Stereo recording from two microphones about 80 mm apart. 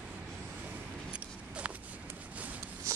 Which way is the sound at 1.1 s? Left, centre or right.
Centre.